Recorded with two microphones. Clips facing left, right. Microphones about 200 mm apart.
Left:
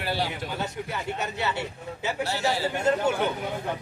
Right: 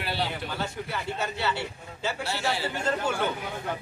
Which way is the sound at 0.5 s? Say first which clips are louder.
Left 1 dB; 15° left (ahead or behind).